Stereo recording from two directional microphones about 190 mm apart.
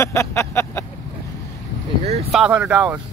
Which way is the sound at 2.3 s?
5° right (ahead or behind).